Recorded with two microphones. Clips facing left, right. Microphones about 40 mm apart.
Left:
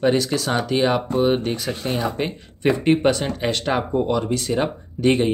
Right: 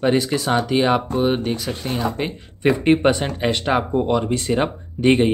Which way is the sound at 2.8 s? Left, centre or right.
Centre.